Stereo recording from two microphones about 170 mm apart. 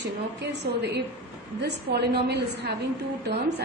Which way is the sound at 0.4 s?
75° right (ahead or behind).